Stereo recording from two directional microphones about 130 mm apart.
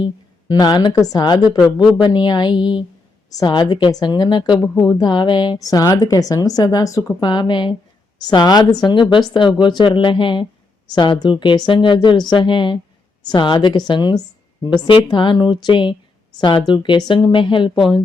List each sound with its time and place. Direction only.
0.0 s a woman's voice: 30° left (ahead or behind)
2.0 s a woman's voice: 35° left (ahead or behind)